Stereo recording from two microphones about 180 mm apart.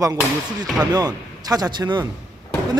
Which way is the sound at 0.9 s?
20° right (ahead or behind).